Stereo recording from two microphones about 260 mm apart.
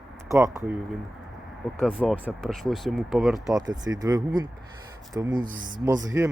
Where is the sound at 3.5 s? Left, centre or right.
Centre.